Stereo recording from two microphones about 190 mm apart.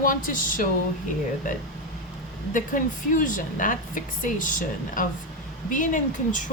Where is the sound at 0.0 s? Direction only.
45° left (ahead or behind).